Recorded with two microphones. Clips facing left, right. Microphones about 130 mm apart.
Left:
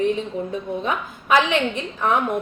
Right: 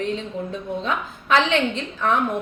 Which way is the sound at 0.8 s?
15° left (ahead or behind).